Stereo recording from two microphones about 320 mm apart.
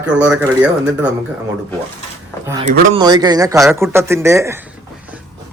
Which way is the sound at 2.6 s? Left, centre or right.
Right.